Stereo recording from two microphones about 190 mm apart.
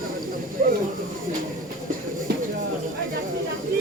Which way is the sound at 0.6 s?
45° right (ahead or behind).